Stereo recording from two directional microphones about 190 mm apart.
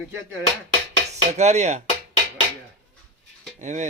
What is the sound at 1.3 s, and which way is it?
Speech, 35° right (ahead or behind).